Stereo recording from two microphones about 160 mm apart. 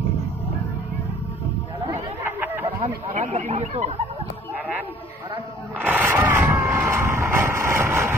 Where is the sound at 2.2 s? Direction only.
15° right (ahead or behind).